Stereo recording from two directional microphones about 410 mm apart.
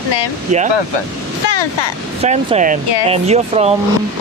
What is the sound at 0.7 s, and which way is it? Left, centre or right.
Speech, left.